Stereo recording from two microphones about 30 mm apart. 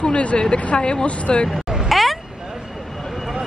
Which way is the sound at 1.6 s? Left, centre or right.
Centre.